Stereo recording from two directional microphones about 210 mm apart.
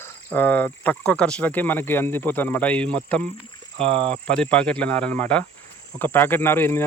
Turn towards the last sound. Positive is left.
turn(degrees=10)  # may be behind; listen again after turning